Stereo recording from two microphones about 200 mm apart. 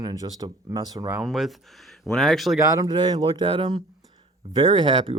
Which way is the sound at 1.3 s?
Centre (ahead or behind).